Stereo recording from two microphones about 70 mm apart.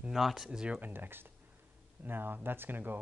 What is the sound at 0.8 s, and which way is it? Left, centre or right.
Speech, right.